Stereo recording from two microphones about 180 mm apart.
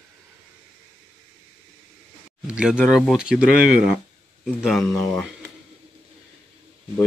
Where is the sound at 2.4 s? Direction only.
5° right (ahead or behind).